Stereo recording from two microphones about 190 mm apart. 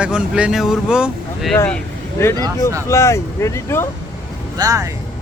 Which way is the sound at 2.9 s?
15° left (ahead or behind).